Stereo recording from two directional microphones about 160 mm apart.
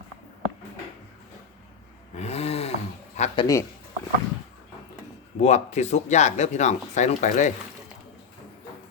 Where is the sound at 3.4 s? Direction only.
20° left (ahead or behind).